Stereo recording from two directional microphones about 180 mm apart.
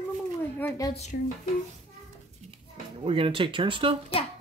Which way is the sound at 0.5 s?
15° left (ahead or behind).